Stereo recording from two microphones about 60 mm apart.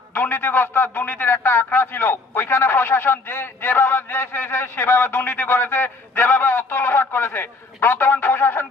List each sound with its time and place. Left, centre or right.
0.1 s a man's voice: left